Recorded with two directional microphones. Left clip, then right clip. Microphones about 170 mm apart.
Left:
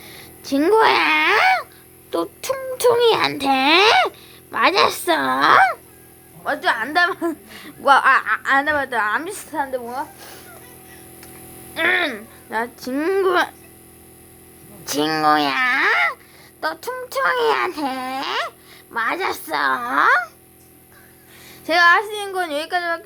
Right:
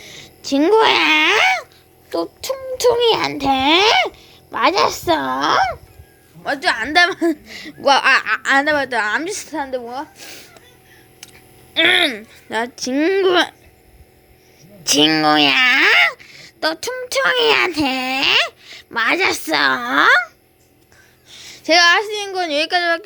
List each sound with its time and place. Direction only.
0.0 s a sound: 20° right (ahead or behind)
2.0 s speech: 5° left (ahead or behind)
6.4 s speech: 40° right (ahead or behind)
7.4 s speech: 20° right (ahead or behind)
7.9 s speech: 35° right (ahead or behind)
11.7 s speech: 45° right (ahead or behind); by 13.2 s 20° right (ahead or behind)
13.2 s speech: 30° right (ahead or behind)
14.8 s speech: 35° right (ahead or behind)
21.6 s speech: 35° right (ahead or behind)